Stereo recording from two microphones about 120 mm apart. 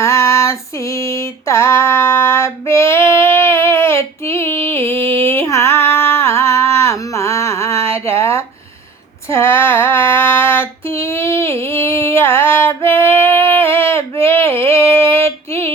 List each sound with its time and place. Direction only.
0.0 s female singing: 25° left (ahead or behind)
5.2 s a sound: 20° left (ahead or behind)
9.3 s female singing: 20° left (ahead or behind)